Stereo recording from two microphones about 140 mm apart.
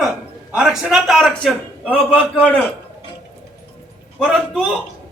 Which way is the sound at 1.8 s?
10° right (ahead or behind).